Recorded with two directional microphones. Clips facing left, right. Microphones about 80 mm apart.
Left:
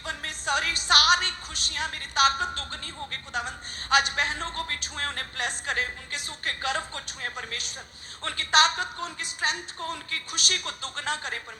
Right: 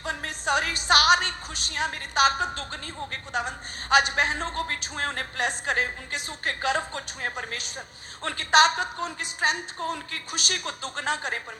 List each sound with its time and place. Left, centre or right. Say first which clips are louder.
0.0 s music: right 3 dB; right
1.7 s a woman's voice: right 3 dB; right